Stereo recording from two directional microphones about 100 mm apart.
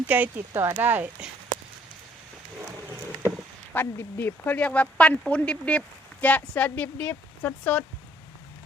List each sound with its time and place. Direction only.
0.1 s speech: 15° right (ahead or behind)
3.7 s speech: 20° left (ahead or behind)